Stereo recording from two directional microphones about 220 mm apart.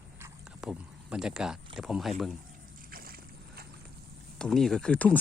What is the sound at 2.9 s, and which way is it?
Boat, 40° right (ahead or behind).